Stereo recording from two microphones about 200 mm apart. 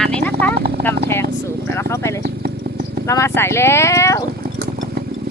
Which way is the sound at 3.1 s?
15° left (ahead or behind).